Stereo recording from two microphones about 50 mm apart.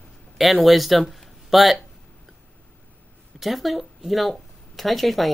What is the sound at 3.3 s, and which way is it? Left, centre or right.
Speech, centre.